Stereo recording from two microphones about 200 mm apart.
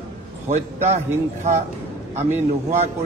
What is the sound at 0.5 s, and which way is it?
A man's voice, 35° right (ahead or behind).